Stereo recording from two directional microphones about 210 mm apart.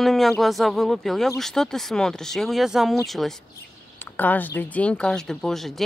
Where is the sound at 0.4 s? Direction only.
Centre (ahead or behind).